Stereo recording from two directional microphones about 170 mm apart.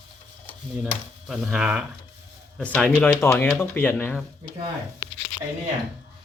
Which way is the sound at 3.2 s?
15° left (ahead or behind).